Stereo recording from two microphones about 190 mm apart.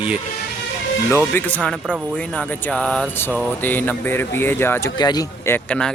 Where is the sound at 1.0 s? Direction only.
10° left (ahead or behind).